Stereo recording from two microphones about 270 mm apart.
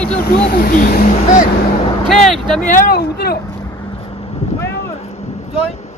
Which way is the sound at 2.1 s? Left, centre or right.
Centre.